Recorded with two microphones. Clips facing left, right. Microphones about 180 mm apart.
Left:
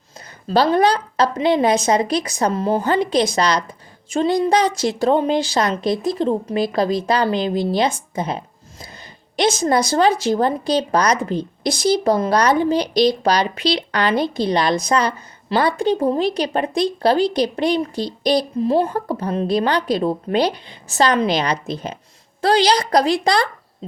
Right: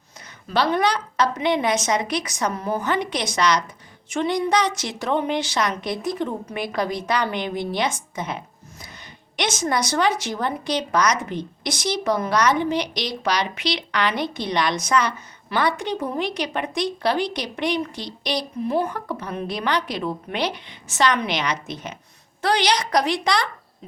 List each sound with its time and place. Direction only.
0.4 s a woman's voice: 35° left (ahead or behind)